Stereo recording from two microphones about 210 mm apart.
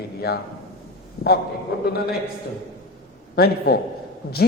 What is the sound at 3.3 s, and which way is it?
Speech, 50° left (ahead or behind).